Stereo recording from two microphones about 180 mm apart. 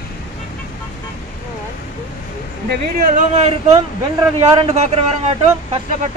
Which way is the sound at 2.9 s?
45° right (ahead or behind).